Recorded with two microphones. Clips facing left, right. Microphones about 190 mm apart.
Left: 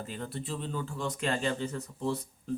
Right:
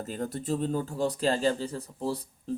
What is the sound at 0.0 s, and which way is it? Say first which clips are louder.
Speech: right 5 dB; 40° right (ahead or behind).